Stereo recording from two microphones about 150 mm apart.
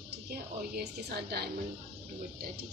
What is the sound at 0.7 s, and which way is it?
Speech, 90° right.